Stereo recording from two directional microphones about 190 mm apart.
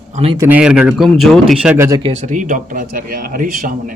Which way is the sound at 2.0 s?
40° right (ahead or behind).